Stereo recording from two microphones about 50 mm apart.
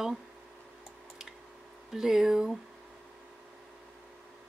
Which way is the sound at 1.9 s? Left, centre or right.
Centre.